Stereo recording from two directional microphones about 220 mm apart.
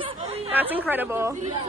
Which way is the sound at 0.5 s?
10° right (ahead or behind).